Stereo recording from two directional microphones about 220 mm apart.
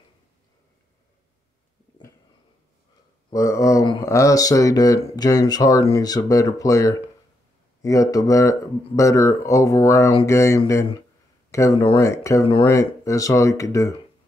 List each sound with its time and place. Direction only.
3.3 s speech: 15° left (ahead or behind)